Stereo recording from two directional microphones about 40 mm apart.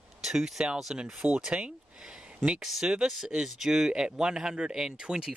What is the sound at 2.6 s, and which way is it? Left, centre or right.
Speech, centre.